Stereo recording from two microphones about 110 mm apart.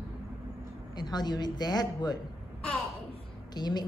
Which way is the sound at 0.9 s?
40° left (ahead or behind).